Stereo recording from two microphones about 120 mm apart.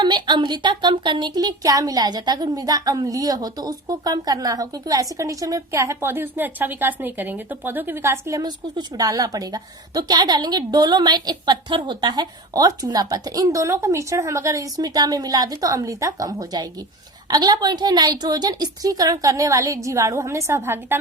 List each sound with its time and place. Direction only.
0.0 s speech: 40° right (ahead or behind); by 21.0 s 20° right (ahead or behind)